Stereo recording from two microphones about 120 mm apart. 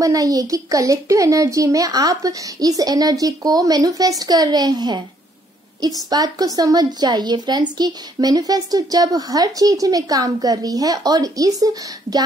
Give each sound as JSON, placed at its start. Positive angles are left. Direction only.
{"t": 0.0, "sound": "a woman's voice", "side_deg": -30}
{"t": 6.0, "sound": "a woman's voice", "side_deg": -30}